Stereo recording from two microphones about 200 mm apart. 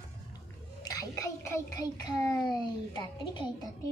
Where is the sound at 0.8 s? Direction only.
20° left (ahead or behind).